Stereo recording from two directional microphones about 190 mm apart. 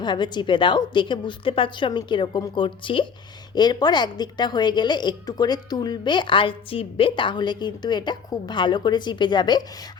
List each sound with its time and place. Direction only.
0.0 s a woman's voice: 25° left (ahead or behind)